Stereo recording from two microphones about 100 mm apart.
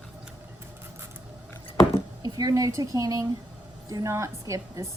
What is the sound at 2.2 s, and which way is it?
A woman's voice, 40° right (ahead or behind).